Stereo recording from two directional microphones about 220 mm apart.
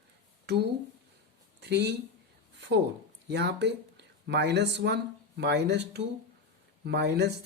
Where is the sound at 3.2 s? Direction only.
50° right (ahead or behind).